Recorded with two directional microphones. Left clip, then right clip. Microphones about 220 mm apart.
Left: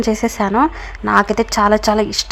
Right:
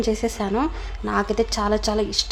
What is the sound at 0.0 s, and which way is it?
A woman's voice, 20° left (ahead or behind).